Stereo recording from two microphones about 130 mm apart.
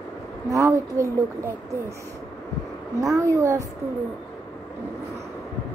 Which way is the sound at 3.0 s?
25° right (ahead or behind).